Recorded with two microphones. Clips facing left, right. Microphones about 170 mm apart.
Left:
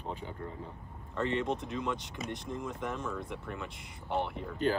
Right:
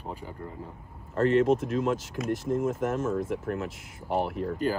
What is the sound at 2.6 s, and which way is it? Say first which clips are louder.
Speech: right 9 dB; 45° right (ahead or behind).